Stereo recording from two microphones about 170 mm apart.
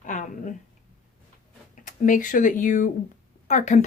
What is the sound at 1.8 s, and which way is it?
A woman's voice, 50° left (ahead or behind).